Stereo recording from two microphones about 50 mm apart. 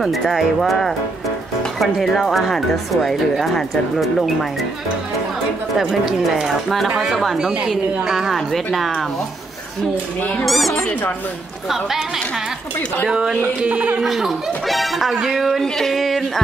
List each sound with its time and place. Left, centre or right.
0.2 s speech: centre
2.0 s speech: centre
5.9 s a woman's voice: centre
10.4 s speech: centre
10.9 s speech: left
13.6 s a man's voice: right
14.0 s speech: centre